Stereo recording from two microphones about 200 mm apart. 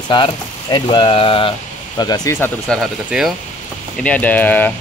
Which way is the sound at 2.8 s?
Centre (ahead or behind).